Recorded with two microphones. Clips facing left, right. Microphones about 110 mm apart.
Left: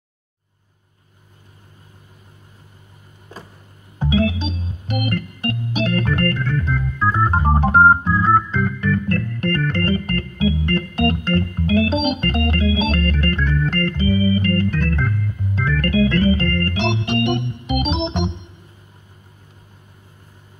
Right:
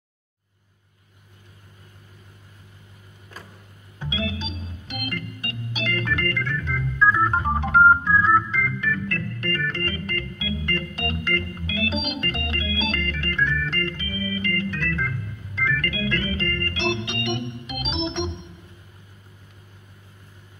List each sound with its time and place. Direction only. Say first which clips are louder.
4.0 s organ: left 10 dB; 55° left (ahead or behind)
8.2 s organ: left 3 dB; 50° left (ahead or behind)